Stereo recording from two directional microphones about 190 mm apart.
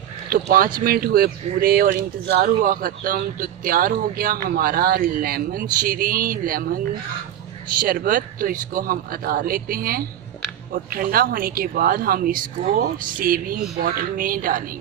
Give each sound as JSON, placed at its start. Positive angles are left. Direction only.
{"t": 0.3, "sound": "speech", "side_deg": -50}